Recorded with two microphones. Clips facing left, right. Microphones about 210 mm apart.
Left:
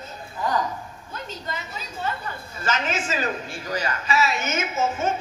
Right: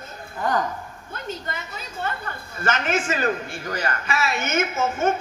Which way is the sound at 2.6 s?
55° right (ahead or behind).